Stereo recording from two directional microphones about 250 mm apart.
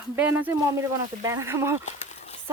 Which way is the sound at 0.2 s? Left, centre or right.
Centre.